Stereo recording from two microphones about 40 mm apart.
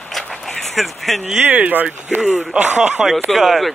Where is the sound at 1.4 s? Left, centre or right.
Right.